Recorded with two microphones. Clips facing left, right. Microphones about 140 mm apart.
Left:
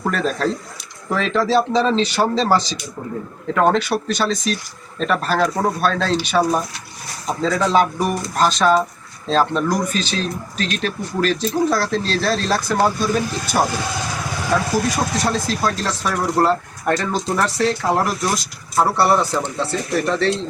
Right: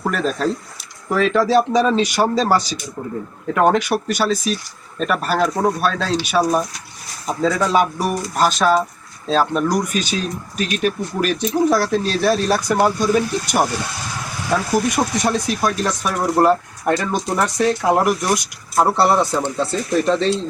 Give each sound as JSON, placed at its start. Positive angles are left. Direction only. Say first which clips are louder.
{"t": 0.0, "sound": "speech", "louder": "even", "side_deg": -5}
{"t": 14.8, "sound": "speech", "louder": "right 1 dB", "side_deg": -15}